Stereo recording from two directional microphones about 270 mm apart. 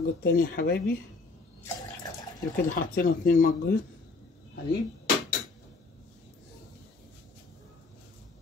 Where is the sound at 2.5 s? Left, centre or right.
Left.